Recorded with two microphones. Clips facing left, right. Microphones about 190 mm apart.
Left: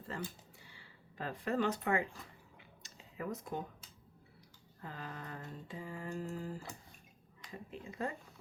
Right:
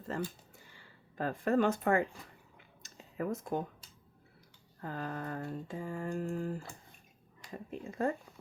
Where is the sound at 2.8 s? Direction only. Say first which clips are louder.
Right 6 dB; 45° right (ahead or behind).